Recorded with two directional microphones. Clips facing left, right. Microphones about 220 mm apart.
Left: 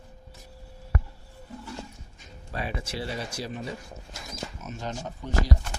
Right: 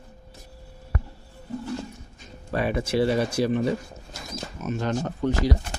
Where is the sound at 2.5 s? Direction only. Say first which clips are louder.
Right 9 dB; 60° right (ahead or behind).